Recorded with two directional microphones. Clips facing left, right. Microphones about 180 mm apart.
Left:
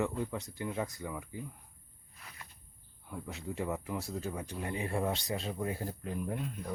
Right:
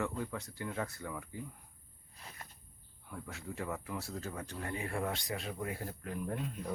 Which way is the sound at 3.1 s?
20° left (ahead or behind).